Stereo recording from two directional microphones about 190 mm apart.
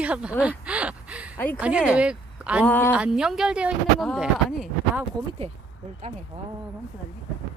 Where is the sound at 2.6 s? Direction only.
10° left (ahead or behind).